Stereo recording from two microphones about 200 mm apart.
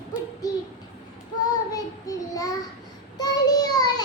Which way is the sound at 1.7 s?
15° left (ahead or behind).